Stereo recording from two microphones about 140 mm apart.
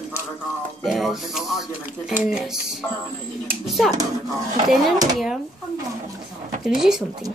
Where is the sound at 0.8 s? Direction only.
Centre (ahead or behind).